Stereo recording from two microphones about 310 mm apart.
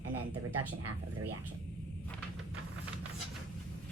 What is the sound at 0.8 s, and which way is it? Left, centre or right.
Speech, right.